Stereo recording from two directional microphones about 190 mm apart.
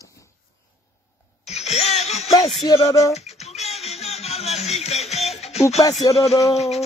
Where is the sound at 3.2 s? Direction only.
35° left (ahead or behind).